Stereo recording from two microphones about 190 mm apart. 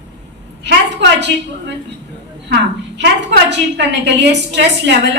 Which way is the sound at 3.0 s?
65° right (ahead or behind).